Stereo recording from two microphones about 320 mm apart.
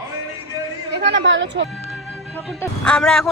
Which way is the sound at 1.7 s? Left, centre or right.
Centre.